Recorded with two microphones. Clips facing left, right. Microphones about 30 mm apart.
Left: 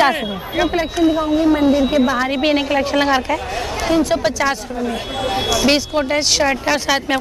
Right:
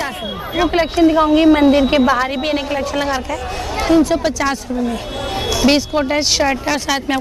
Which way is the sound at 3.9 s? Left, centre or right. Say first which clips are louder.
Right 3 dB; centre.